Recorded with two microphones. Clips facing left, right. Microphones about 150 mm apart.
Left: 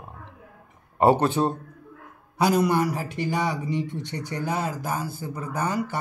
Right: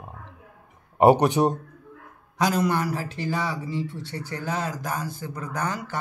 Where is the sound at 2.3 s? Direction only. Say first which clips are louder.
Left 2 dB; 10° left (ahead or behind).